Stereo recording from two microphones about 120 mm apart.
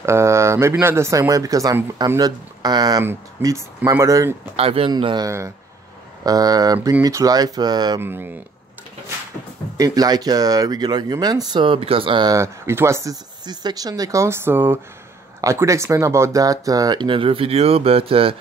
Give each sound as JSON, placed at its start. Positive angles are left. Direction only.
{"t": 0.0, "sound": "speech", "side_deg": -25}
{"t": 3.0, "sound": "speech", "side_deg": -25}
{"t": 4.6, "sound": "speech", "side_deg": -55}
{"t": 4.9, "sound": "speech", "side_deg": -35}
{"t": 8.0, "sound": "speech", "side_deg": -15}
{"t": 9.8, "sound": "speech", "side_deg": -30}
{"t": 12.4, "sound": "speech", "side_deg": -20}